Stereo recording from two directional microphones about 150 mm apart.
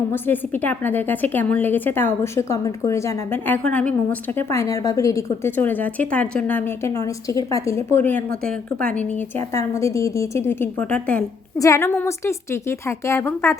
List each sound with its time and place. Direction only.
0.1 s a woman's voice: 15° left (ahead or behind)
11.5 s a woman's voice: 20° left (ahead or behind)